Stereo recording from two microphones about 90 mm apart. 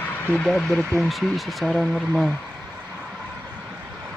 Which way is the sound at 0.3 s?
10° left (ahead or behind).